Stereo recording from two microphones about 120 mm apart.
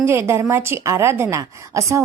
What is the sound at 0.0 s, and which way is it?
A woman's voice, 20° right (ahead or behind).